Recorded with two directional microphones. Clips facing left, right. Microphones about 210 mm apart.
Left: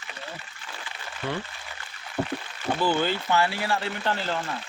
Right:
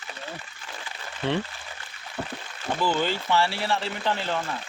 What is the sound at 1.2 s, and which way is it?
Speech, 25° right (ahead or behind).